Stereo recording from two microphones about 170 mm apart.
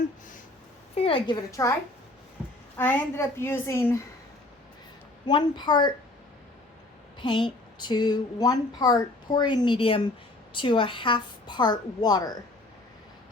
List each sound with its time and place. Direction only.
0.9 s a woman's voice: 35° left (ahead or behind)
1.5 s speech: 20° left (ahead or behind)
2.7 s a woman's voice: 15° left (ahead or behind)
5.2 s speech: 25° left (ahead or behind)
7.2 s speech: 30° left (ahead or behind)